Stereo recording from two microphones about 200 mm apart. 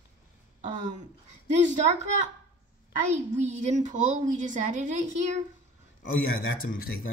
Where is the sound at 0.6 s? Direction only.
35° right (ahead or behind).